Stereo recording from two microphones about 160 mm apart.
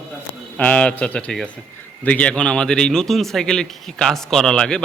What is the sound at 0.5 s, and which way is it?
A man's voice, 10° left (ahead or behind).